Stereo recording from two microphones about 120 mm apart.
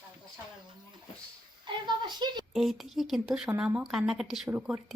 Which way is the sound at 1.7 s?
40° right (ahead or behind).